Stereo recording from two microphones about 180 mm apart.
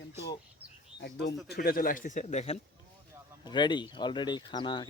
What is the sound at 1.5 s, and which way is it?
Speech, 60° left (ahead or behind).